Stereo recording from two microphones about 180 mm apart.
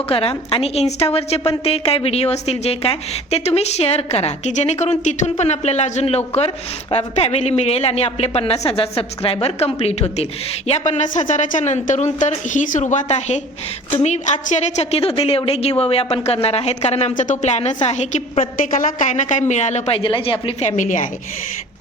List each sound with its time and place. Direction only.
0.1 s a woman's voice: 30° left (ahead or behind)